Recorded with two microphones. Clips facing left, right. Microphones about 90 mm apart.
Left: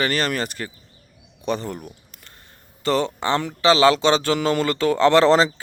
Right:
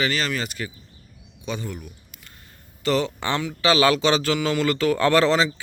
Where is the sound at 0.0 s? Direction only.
45° left (ahead or behind).